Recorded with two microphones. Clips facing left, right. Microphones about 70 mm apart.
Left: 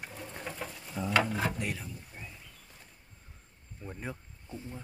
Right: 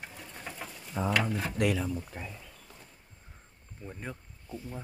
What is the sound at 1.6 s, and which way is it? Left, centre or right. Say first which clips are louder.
Speech: right 8 dB; right.